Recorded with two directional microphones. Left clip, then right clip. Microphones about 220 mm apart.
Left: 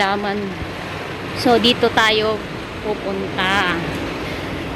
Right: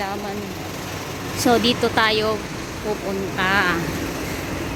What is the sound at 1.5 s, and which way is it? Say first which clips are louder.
Speech: left 4 dB; centre (ahead or behind).